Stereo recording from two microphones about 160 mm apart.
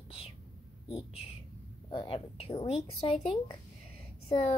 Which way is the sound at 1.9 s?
35° left (ahead or behind).